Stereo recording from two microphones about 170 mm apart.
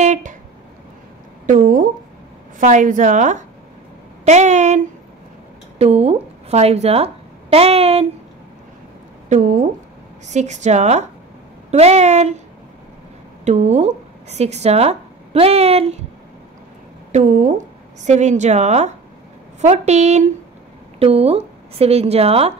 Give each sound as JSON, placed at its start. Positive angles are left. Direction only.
{"t": 0.0, "sound": "a sound", "side_deg": -45}
{"t": 1.4, "sound": "a woman's voice", "side_deg": -50}
{"t": 9.3, "sound": "a woman's voice", "side_deg": -45}
{"t": 13.5, "sound": "speech", "side_deg": -40}
{"t": 17.1, "sound": "a woman's voice", "side_deg": -45}